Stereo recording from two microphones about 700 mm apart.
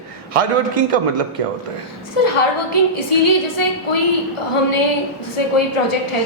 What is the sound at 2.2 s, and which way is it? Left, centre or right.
Speech, left.